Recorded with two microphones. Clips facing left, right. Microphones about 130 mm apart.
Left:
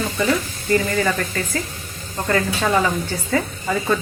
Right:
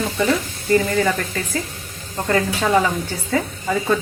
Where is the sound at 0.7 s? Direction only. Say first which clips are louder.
Right 2 dB; 20° right (ahead or behind).